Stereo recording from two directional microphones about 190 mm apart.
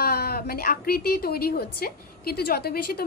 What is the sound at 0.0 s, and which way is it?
A woman's voice, 55° left (ahead or behind).